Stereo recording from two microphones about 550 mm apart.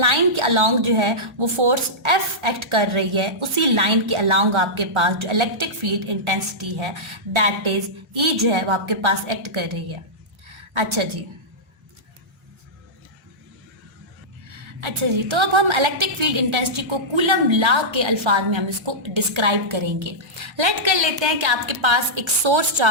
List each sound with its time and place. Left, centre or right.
0.0 s a woman's voice: right
10.5 s a sound: right
14.5 s a woman's voice: right